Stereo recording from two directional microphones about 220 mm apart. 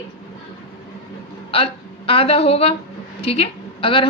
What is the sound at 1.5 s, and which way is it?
A woman's voice, 25° left (ahead or behind).